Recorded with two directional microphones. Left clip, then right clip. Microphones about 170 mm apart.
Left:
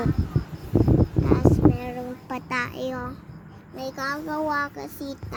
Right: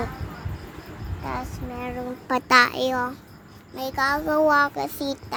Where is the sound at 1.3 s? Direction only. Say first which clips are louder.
Left 15 dB; 30° right (ahead or behind).